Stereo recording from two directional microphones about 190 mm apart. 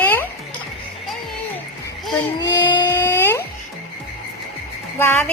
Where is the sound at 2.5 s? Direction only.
20° left (ahead or behind).